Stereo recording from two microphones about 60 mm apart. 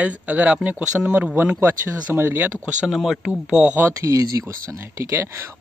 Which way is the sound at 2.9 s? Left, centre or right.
Centre.